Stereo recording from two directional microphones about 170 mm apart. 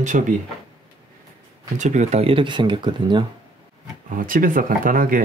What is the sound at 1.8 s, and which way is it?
Speech, 45° right (ahead or behind).